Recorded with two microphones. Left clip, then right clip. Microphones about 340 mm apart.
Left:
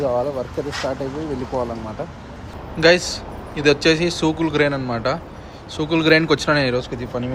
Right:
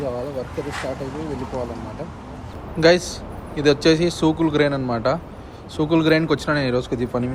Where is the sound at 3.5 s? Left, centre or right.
Centre.